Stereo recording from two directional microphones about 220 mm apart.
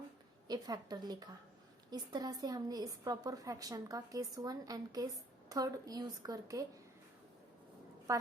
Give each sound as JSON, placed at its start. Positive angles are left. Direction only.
{"t": 0.4, "sound": "a woman's voice", "side_deg": -20}
{"t": 8.1, "sound": "a woman's voice", "side_deg": -15}